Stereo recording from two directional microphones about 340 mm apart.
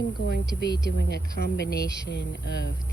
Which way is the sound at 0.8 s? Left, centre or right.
Left.